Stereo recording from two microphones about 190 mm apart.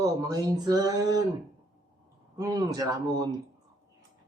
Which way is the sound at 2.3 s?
20° right (ahead or behind).